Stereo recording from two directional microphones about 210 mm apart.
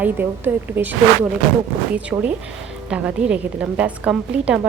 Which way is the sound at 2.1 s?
15° right (ahead or behind).